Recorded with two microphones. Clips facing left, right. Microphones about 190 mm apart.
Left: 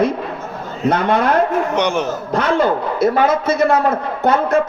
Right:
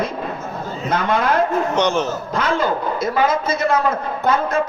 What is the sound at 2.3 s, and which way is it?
A man's voice, 65° left (ahead or behind).